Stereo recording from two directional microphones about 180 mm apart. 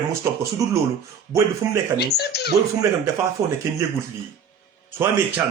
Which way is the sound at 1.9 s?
65° left (ahead or behind).